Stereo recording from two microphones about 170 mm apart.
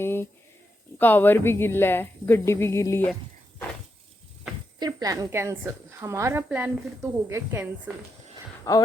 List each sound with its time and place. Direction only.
0.0 s a sound: 15° left (ahead or behind)
0.9 s a woman's voice: 10° left (ahead or behind)
4.8 s a woman's voice: 20° right (ahead or behind)
8.7 s speech: 20° left (ahead or behind)